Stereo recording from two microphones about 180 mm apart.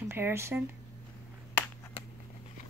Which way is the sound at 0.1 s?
15° right (ahead or behind).